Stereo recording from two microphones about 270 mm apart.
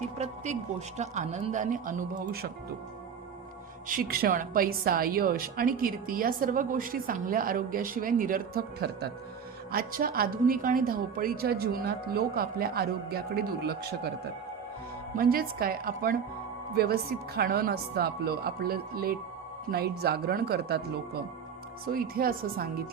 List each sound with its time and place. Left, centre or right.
0.9 s speech: right
3.8 s a woman's voice: right
15.1 s a woman's voice: right